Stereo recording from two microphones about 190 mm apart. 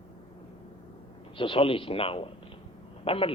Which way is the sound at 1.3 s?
25° left (ahead or behind).